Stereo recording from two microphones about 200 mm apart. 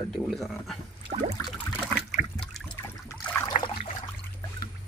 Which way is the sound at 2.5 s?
5° left (ahead or behind).